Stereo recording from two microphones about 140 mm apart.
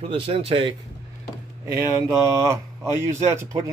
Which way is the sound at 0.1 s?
40° right (ahead or behind).